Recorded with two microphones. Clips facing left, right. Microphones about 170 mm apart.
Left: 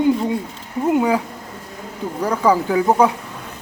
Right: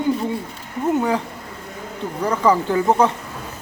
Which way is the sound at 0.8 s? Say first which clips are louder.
Left 2 dB; 10° left (ahead or behind).